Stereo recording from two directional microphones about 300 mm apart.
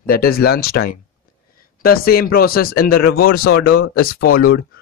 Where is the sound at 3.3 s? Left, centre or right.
Left.